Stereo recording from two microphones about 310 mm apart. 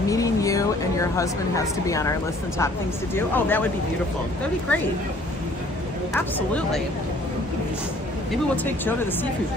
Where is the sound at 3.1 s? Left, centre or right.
Centre.